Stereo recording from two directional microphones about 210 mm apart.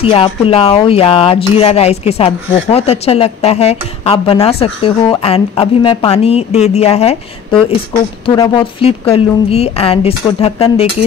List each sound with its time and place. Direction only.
0.0 s speech: 25° left (ahead or behind)
8.4 s speech: 25° left (ahead or behind)